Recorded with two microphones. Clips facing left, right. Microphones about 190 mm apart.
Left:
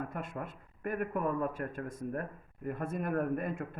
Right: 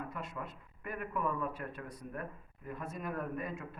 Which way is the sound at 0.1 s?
50° left (ahead or behind).